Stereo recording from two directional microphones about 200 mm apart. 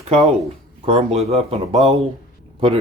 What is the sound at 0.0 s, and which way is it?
Speech, 35° right (ahead or behind).